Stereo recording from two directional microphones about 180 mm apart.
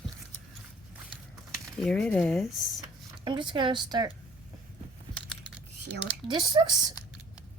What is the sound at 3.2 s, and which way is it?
Speech, 25° right (ahead or behind).